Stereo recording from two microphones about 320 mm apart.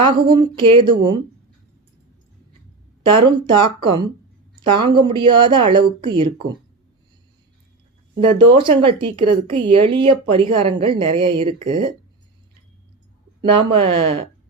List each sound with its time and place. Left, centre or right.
0.3 s a woman's voice: centre
3.3 s a woman's voice: centre
8.2 s a woman's voice: centre
13.4 s a woman's voice: centre